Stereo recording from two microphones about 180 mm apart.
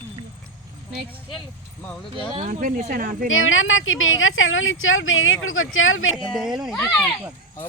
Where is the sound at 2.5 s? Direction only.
45° right (ahead or behind).